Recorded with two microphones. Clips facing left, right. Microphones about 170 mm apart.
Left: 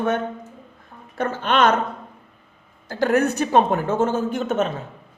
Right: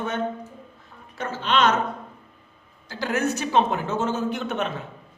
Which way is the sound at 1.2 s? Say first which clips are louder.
Left 3 dB; 55° left (ahead or behind).